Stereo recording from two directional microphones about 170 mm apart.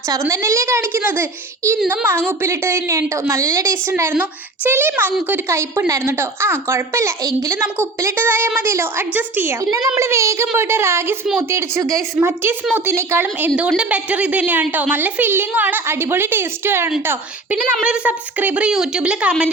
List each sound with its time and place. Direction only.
0.1 s a woman's voice: 20° right (ahead or behind)